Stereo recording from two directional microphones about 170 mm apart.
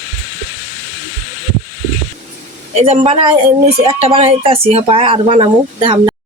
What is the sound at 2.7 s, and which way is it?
Speech, 40° right (ahead or behind).